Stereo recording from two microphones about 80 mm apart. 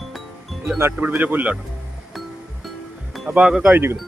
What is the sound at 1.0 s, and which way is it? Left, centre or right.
Speech, centre.